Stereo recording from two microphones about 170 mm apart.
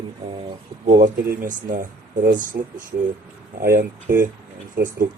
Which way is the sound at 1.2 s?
55° right (ahead or behind).